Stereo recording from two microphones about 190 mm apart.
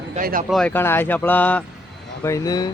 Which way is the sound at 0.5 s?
5° left (ahead or behind).